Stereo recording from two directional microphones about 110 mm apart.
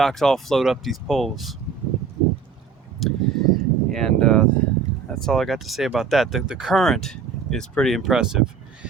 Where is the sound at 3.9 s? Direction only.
5° left (ahead or behind).